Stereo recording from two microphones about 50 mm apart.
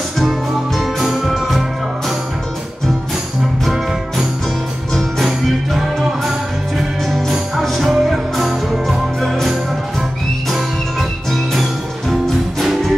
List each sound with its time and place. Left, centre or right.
0.2 s music: centre
3.6 s music: centre